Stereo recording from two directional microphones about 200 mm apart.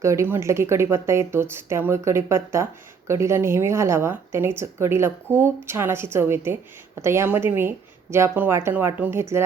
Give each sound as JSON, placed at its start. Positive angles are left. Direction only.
{"t": 0.0, "sound": "a woman's voice", "side_deg": -15}